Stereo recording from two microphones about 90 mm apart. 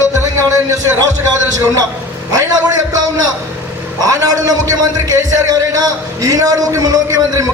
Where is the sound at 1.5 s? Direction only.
40° right (ahead or behind).